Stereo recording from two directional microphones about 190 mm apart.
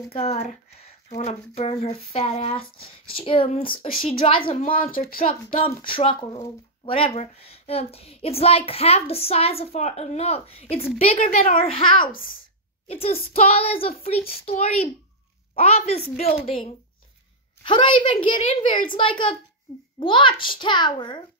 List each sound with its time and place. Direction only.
0.1 s a woman's voice: 30° left (ahead or behind)
4.9 s speech: 50° left (ahead or behind)
5.7 s a child's voice: 25° left (ahead or behind)
11.3 s speech: 45° left (ahead or behind)
11.6 s a child's voice: 25° left (ahead or behind)